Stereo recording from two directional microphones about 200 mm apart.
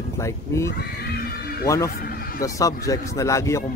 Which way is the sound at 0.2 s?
15° left (ahead or behind).